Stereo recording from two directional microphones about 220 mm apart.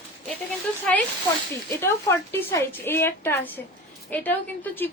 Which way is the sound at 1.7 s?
10° left (ahead or behind).